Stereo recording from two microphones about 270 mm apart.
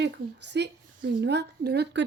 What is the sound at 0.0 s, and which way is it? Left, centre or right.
Speech, right.